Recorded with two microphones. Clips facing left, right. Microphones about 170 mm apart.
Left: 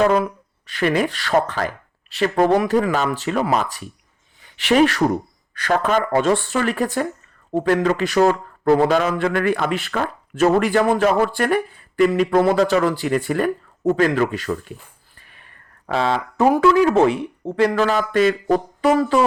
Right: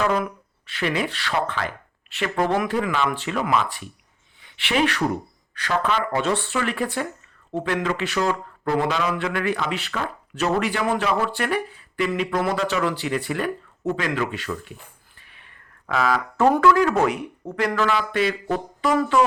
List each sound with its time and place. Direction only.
0.0 s speech: 35° left (ahead or behind)
0.7 s speech: 45° left (ahead or behind)
15.2 s a sound: 45° left (ahead or behind)
16.0 s speech: 25° left (ahead or behind)
16.4 s speech: 15° left (ahead or behind)
16.6 s speech: 25° left (ahead or behind)